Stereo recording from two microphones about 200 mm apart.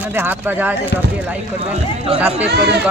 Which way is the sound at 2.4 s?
55° right (ahead or behind).